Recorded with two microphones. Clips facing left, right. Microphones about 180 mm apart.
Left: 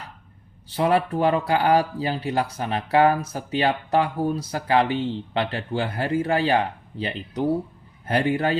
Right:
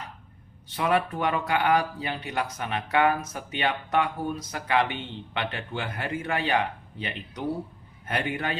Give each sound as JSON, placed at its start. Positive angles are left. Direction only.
{"t": 0.7, "sound": "speech", "side_deg": 30}